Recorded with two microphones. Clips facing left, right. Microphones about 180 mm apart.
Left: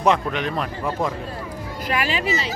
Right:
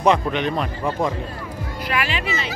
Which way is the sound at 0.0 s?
Centre (ahead or behind).